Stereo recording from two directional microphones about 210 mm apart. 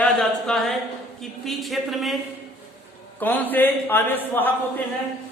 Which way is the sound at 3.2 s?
10° left (ahead or behind).